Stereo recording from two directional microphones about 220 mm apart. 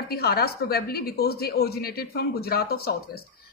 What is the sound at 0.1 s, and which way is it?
Speech, 45° left (ahead or behind).